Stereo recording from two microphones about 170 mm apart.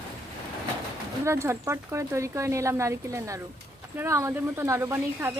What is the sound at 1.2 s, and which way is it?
Speech, 15° right (ahead or behind).